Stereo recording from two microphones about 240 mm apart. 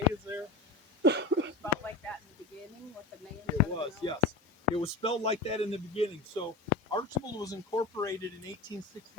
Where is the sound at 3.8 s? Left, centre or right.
Centre.